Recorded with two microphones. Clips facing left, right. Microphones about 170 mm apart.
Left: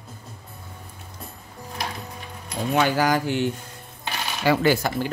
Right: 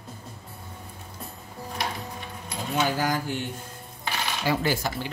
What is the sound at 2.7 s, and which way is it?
Speech, 75° left (ahead or behind).